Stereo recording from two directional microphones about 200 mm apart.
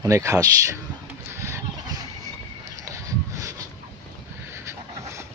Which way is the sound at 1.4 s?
15° right (ahead or behind).